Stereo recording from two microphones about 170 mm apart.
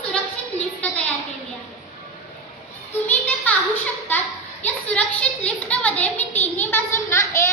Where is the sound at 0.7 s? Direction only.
10° left (ahead or behind).